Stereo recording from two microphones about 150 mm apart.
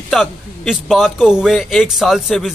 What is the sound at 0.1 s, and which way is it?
A man's voice, centre (ahead or behind).